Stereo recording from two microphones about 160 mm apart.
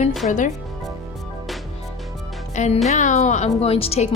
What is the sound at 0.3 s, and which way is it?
Speech, 50° left (ahead or behind).